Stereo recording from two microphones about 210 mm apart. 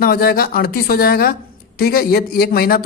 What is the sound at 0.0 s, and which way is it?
A man's voice, 45° left (ahead or behind).